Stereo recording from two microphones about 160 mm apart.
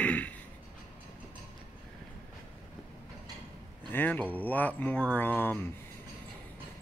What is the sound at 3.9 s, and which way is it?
Speech, 10° left (ahead or behind).